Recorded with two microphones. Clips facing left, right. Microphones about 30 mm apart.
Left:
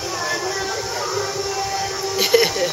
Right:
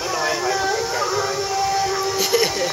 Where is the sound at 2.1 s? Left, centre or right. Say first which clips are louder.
Left 5 dB; centre.